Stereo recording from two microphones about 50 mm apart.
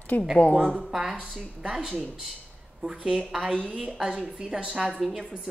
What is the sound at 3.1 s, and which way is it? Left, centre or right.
A woman's voice, centre.